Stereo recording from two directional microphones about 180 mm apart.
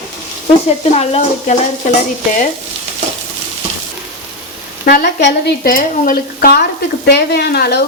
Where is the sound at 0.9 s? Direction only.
35° left (ahead or behind).